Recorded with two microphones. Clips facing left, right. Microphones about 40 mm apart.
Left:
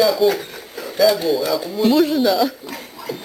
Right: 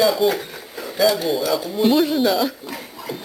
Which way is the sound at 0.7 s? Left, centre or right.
Centre.